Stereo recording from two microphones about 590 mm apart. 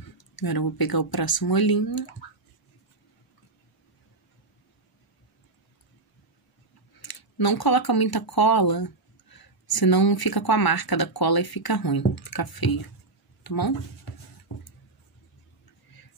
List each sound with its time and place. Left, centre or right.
0.4 s speech: left
7.0 s speech: left